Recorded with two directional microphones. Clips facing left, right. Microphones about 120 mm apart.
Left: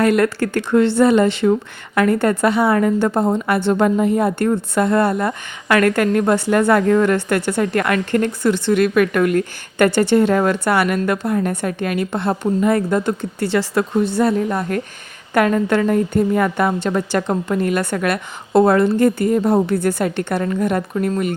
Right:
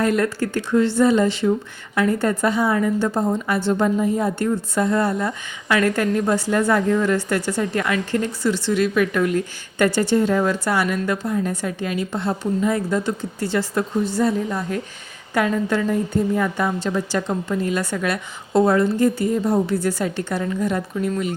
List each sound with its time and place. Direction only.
0.0 s a woman's voice: 70° left (ahead or behind)